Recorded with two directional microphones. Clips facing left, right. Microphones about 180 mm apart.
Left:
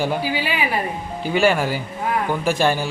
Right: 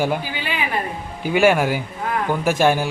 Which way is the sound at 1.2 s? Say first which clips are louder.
Right 2 dB; 15° right (ahead or behind).